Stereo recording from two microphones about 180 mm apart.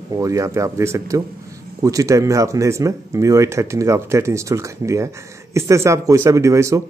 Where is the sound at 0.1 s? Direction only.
20° right (ahead or behind).